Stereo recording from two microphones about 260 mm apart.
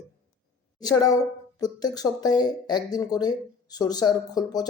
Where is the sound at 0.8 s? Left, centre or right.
Centre.